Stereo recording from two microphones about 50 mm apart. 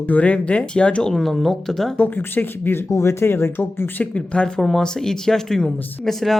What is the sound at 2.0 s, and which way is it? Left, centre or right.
Speech, left.